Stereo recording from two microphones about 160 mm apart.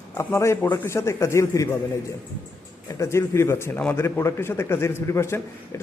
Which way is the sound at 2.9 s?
15° left (ahead or behind).